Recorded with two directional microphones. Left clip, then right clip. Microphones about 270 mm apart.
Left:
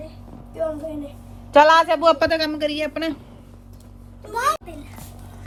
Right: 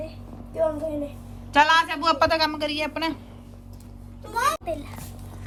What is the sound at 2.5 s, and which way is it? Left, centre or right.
Speech, left.